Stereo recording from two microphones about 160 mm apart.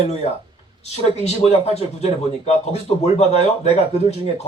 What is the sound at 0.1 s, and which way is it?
Speech, 40° left (ahead or behind).